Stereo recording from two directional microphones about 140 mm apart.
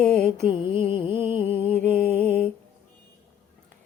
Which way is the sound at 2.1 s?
10° left (ahead or behind).